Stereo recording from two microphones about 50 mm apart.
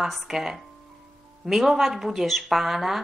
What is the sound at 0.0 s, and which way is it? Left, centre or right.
Speech, centre.